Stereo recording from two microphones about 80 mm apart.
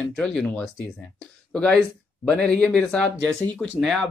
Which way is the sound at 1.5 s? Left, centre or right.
Centre.